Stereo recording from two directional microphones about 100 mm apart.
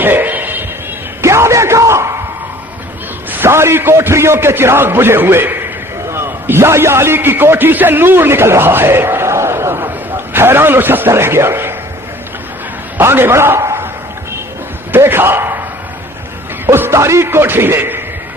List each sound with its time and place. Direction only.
0.0 s a sound: 20° right (ahead or behind)
1.2 s bellow: 30° right (ahead or behind)
3.3 s a man's voice: 25° right (ahead or behind)
13.0 s a man's voice: 20° right (ahead or behind)
14.9 s a sound: 20° right (ahead or behind)
16.6 s a man's voice: 25° right (ahead or behind)